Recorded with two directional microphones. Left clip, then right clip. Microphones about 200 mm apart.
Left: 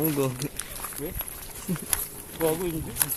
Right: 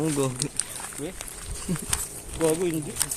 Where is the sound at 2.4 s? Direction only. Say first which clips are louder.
Right 2 dB; 10° right (ahead or behind).